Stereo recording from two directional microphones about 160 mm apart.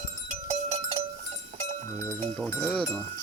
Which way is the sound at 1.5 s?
45° right (ahead or behind).